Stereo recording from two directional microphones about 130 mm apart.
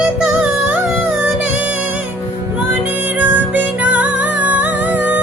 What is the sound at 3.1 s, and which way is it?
Music, 10° right (ahead or behind).